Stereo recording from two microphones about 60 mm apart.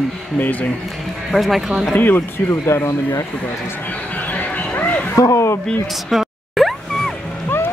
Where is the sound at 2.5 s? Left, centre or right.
Left.